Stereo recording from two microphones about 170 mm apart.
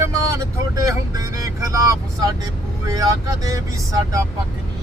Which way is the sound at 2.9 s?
20° right (ahead or behind).